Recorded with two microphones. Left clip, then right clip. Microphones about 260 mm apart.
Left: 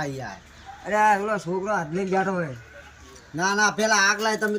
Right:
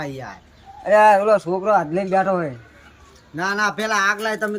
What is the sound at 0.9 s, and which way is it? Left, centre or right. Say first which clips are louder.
A man's voice: right 8 dB; right.